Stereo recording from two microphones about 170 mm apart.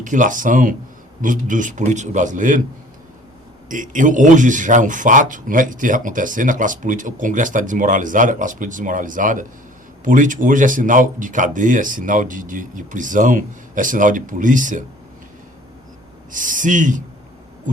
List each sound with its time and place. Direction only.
0.0 s speech: 50° right (ahead or behind)
3.7 s speech: 50° right (ahead or behind)
16.3 s speech: 50° right (ahead or behind)